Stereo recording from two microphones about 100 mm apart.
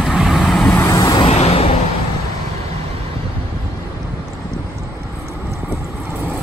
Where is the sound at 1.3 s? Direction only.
90° left.